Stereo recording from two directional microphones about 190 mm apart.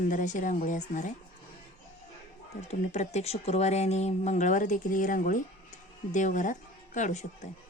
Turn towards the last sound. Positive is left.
turn(degrees=40)  # may be behind; listen again after turning